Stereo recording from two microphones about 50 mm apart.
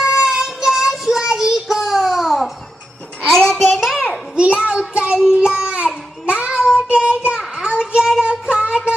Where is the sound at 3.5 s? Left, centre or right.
Centre.